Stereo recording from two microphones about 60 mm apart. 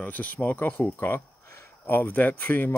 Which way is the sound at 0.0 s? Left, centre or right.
Left.